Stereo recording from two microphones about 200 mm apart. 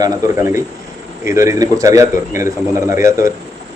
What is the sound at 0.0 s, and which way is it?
A man's voice, 15° right (ahead or behind).